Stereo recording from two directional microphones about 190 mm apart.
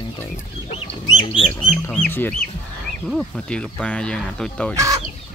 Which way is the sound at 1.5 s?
10° left (ahead or behind).